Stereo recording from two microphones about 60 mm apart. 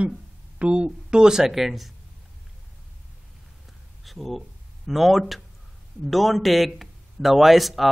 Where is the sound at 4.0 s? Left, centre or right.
Centre.